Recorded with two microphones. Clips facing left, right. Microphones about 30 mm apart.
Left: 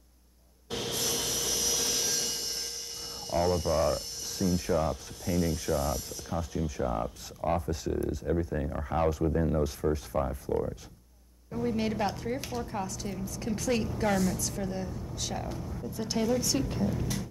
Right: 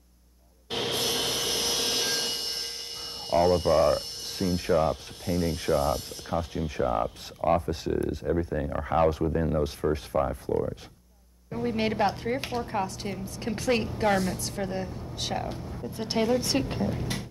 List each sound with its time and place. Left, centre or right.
0.7 s wood: right
3.3 s speech: right
7.7 s speech: right
8.5 s speech: centre
11.5 s speech: right